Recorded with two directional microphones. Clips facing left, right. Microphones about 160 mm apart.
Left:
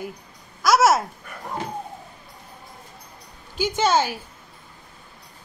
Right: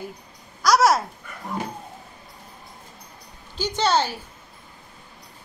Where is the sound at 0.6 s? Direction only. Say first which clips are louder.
Left 1 dB; 5° left (ahead or behind).